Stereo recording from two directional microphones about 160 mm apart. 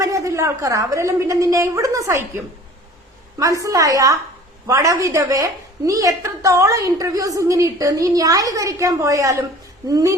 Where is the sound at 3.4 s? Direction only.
20° right (ahead or behind).